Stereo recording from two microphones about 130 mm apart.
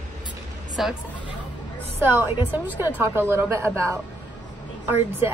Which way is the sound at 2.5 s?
15° right (ahead or behind).